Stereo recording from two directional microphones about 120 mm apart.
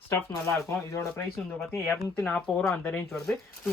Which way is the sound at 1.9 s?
10° left (ahead or behind).